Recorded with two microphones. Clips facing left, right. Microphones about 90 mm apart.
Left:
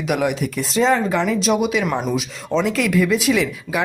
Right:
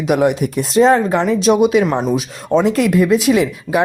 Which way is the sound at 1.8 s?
25° right (ahead or behind).